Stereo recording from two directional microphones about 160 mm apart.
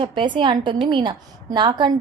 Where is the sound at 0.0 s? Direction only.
30° right (ahead or behind).